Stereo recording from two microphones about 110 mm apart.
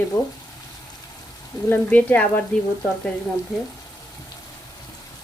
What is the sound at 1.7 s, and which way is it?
Speech, 15° left (ahead or behind).